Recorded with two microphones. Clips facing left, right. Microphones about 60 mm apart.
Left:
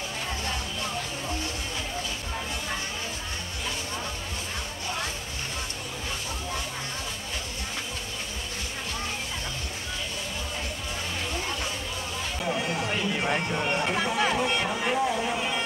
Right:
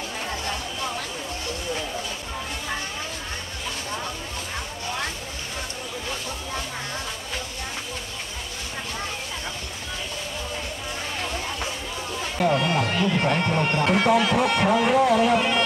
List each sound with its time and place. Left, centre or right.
12.4 s speech: right